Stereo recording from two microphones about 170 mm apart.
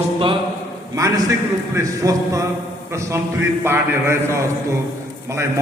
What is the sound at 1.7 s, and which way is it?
A man's voice, 20° right (ahead or behind).